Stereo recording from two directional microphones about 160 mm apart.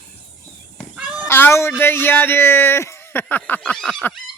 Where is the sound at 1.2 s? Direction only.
15° left (ahead or behind).